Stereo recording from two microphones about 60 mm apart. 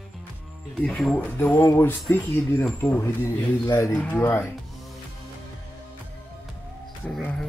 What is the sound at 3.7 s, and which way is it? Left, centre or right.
Speech, left.